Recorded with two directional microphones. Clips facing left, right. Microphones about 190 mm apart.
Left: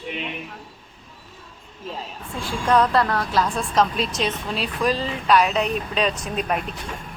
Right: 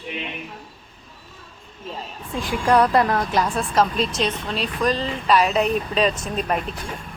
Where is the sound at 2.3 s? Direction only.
15° right (ahead or behind).